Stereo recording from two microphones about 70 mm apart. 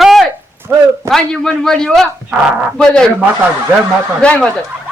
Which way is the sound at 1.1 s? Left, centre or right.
Centre.